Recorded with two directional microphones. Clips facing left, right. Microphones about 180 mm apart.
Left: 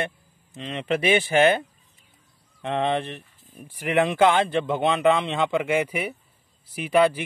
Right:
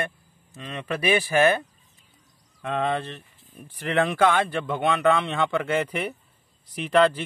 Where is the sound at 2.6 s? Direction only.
25° left (ahead or behind).